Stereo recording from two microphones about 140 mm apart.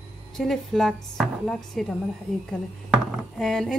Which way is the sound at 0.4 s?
Centre (ahead or behind).